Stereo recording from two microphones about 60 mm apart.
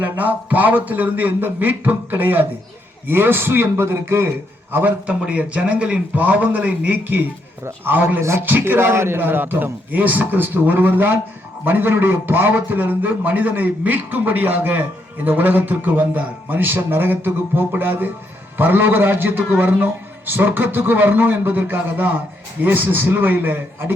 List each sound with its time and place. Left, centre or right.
0.0 s a man's voice: right